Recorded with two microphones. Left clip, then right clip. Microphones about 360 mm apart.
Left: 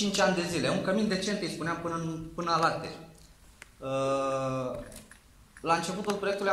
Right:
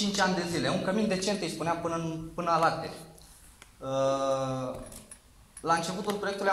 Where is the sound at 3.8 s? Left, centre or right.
Centre.